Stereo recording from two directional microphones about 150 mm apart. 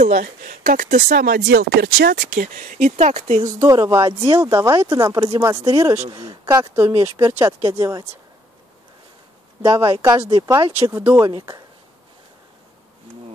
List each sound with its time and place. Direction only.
0.0 s speech: 55° right (ahead or behind); by 2.2 s 90° right
2.3 s speech: 60° right (ahead or behind)
3.4 s speech: 25° right (ahead or behind)
9.6 s speech: 20° right (ahead or behind)